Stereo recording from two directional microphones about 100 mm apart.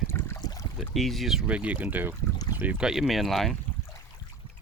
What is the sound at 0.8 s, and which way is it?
Speech, centre (ahead or behind).